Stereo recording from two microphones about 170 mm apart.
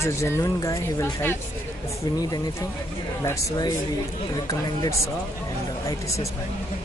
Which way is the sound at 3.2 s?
20° left (ahead or behind).